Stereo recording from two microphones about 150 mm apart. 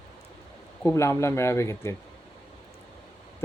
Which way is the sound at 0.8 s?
20° left (ahead or behind).